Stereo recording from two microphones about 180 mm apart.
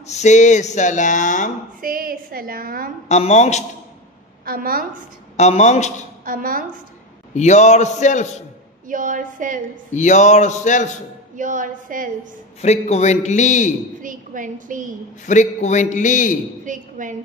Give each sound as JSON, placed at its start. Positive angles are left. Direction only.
{"t": 0.0, "sound": "speech", "side_deg": 40}
{"t": 1.8, "sound": "a woman's voice", "side_deg": -50}
{"t": 3.1, "sound": "speech", "side_deg": 40}
{"t": 4.5, "sound": "a woman's voice", "side_deg": -55}
{"t": 5.4, "sound": "speech", "side_deg": 40}
{"t": 6.2, "sound": "a woman's voice", "side_deg": -50}
{"t": 7.3, "sound": "speech", "side_deg": 40}
{"t": 8.8, "sound": "a woman's voice", "side_deg": -45}
{"t": 9.9, "sound": "speech", "side_deg": 40}
{"t": 11.3, "sound": "a woman's voice", "side_deg": -45}
{"t": 12.6, "sound": "speech", "side_deg": 40}
{"t": 14.0, "sound": "a woman's voice", "side_deg": -45}
{"t": 15.2, "sound": "a man's voice", "side_deg": 40}
{"t": 16.6, "sound": "a woman's voice", "side_deg": -45}